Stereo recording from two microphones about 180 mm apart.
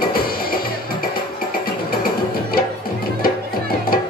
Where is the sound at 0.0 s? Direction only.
55° left (ahead or behind).